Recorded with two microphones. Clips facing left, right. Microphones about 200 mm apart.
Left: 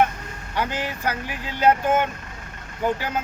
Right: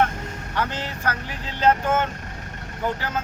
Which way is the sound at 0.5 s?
10° left (ahead or behind).